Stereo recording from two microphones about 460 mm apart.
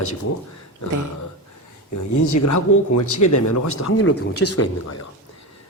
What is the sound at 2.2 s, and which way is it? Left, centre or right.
Speech, left.